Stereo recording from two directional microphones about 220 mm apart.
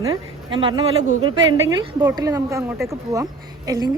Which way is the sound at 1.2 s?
60° right (ahead or behind).